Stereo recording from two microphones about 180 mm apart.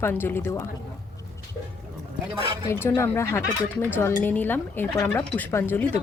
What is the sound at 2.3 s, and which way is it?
Speech, 30° right (ahead or behind).